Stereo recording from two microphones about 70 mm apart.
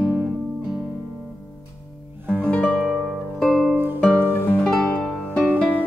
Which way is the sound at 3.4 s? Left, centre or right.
Centre.